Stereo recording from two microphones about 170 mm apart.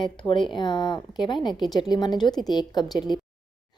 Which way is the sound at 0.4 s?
25° left (ahead or behind).